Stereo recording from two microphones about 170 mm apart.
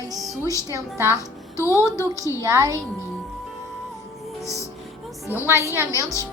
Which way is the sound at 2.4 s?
20° right (ahead or behind).